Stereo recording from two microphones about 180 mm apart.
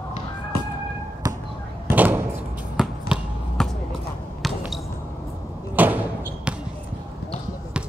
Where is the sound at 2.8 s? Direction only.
Centre (ahead or behind).